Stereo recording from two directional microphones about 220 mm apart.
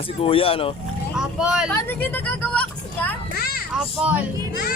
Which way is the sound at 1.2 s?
5° right (ahead or behind).